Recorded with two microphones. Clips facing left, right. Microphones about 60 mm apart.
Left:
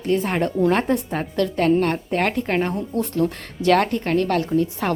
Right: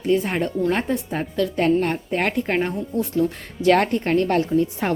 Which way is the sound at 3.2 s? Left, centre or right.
Left.